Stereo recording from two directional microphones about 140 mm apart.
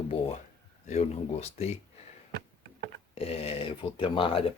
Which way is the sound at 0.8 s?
50° left (ahead or behind).